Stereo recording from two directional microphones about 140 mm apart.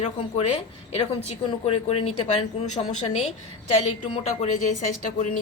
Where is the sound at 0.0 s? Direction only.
45° left (ahead or behind).